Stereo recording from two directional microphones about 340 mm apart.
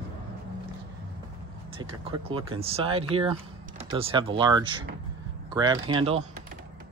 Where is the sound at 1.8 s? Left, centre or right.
Centre.